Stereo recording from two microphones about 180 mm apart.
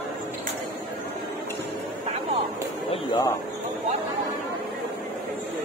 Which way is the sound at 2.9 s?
25° left (ahead or behind).